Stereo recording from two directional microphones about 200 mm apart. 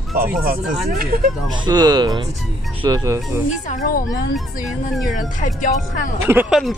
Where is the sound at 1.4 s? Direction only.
20° right (ahead or behind).